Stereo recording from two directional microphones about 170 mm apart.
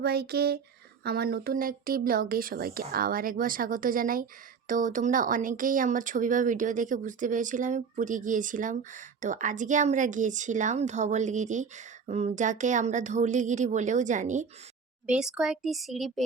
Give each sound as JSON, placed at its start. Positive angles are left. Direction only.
{"t": 0.0, "sound": "a sound", "side_deg": -65}
{"t": 1.0, "sound": "speech", "side_deg": -65}
{"t": 15.0, "sound": "speech", "side_deg": -5}